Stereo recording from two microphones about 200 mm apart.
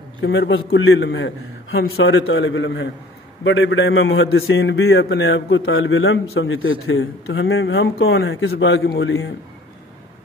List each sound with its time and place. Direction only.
0.2 s a man's voice: 65° left (ahead or behind)
2.1 s a man's voice: 90° left; by 9.1 s 60° left (ahead or behind)